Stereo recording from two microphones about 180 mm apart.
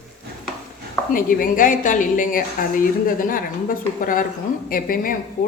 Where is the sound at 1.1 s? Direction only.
50° left (ahead or behind).